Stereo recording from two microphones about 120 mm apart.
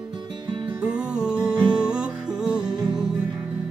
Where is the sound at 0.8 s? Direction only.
10° right (ahead or behind).